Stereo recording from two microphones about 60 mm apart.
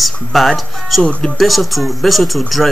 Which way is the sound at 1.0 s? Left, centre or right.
Centre.